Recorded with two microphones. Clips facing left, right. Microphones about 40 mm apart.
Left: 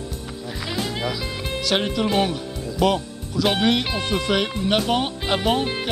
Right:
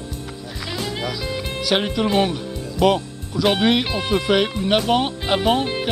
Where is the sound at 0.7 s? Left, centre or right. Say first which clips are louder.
Even; centre.